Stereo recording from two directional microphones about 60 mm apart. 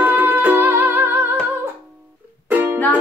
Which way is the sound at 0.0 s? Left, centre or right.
Right.